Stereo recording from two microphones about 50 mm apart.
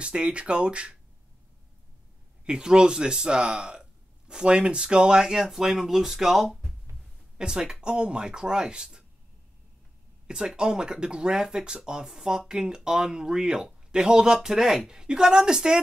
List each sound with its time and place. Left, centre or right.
0.0 s speech: right
2.4 s speech: centre
7.3 s speech: centre
10.2 s speech: centre